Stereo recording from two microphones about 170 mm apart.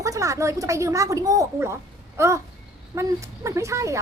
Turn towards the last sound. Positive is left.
turn(degrees=-15)  # may be behind; listen again after turning